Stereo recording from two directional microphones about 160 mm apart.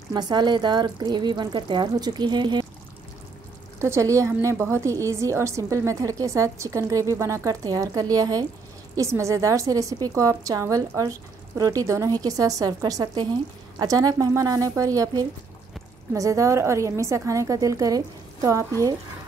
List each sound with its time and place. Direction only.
0.1 s a woman's voice: 25° right (ahead or behind)
3.8 s a woman's voice: 20° right (ahead or behind)